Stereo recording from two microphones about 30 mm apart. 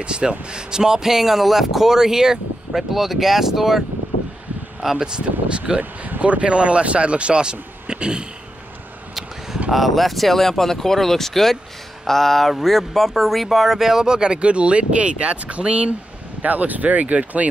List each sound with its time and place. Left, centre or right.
0.0 s speech: right
2.7 s speech: centre
4.9 s speech: right
5.8 s speech: right
6.2 s speech: right
9.7 s speech: centre
14.0 s speech: right
16.4 s speech: right